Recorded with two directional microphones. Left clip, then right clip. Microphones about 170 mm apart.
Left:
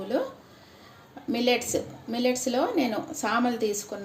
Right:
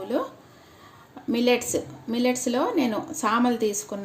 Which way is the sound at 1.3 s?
60° right (ahead or behind).